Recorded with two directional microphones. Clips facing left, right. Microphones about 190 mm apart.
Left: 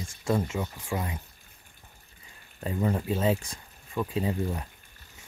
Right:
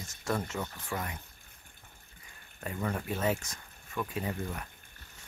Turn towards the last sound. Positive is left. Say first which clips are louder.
# left 6 dB
turn(degrees=25)  # may be behind; listen again after turning